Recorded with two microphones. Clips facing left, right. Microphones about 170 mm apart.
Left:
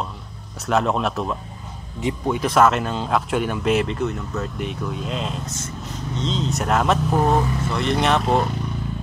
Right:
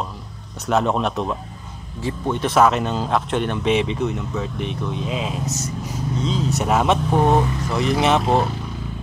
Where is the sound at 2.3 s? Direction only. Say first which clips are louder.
Right 1 dB; centre (ahead or behind).